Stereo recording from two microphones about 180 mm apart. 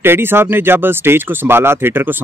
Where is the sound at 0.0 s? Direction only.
10° right (ahead or behind).